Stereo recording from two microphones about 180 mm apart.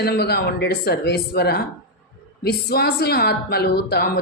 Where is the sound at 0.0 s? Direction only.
60° left (ahead or behind).